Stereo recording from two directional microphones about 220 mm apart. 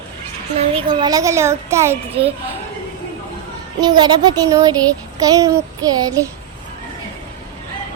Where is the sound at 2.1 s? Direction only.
25° right (ahead or behind).